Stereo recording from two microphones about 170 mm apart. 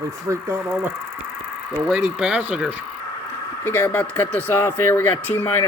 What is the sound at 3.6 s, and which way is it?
Speech, 10° left (ahead or behind).